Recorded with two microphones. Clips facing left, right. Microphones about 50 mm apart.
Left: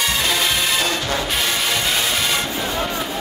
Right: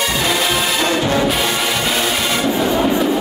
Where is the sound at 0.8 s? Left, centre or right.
Right.